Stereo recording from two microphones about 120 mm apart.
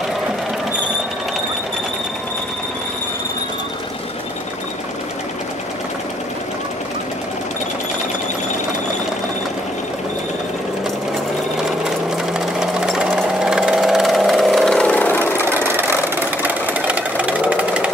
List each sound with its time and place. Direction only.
12.4 s jackhammer: 5° right (ahead or behind)
13.4 s vehicle: 5° right (ahead or behind); by 15.4 s 15° left (ahead or behind)
15.4 s vehicle: 20° right (ahead or behind)
16.4 s sewing machine: 10° right (ahead or behind)